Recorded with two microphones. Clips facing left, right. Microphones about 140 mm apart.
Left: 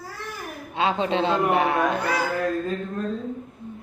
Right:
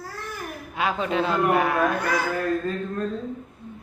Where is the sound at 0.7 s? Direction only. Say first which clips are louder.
Left 2 dB; 25° left (ahead or behind).